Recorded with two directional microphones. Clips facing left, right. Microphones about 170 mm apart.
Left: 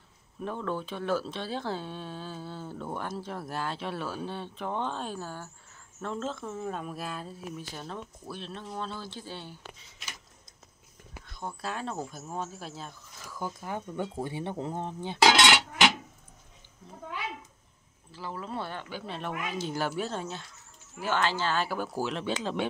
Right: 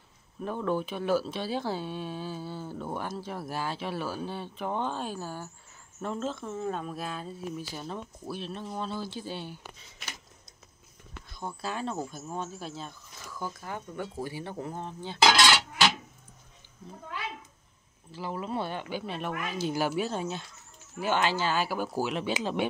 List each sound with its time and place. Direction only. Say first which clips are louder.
0.4 s speech: right 3 dB; 10° right (ahead or behind)
11.3 s speech: right 1 dB; centre (ahead or behind)
13.4 s speech: left 2 dB; 20° left (ahead or behind)
18.1 s speech: right 3 dB; 15° right (ahead or behind)